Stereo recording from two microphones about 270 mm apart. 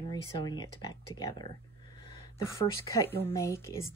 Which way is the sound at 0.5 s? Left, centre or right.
Centre.